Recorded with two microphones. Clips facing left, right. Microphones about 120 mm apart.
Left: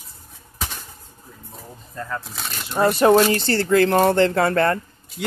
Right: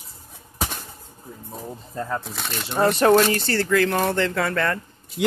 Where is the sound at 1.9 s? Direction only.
25° right (ahead or behind).